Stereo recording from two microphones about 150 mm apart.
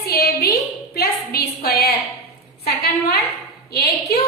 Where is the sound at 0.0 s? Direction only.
90° left.